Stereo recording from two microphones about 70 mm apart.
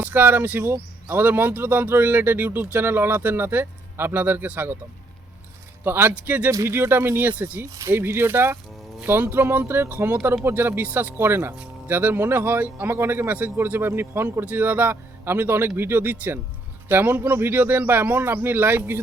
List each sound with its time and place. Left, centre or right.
0.0 s speech: right
5.8 s speech: right
6.7 s speech: right
7.3 s speech: right
7.7 s speech: right
7.9 s speech: right